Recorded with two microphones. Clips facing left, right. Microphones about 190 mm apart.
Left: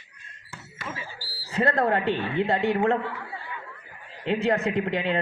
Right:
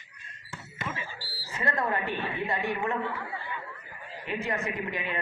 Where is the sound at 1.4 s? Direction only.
65° left (ahead or behind).